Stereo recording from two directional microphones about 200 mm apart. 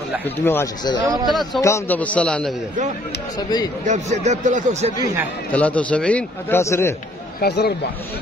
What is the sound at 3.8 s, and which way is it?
Speech, 35° right (ahead or behind).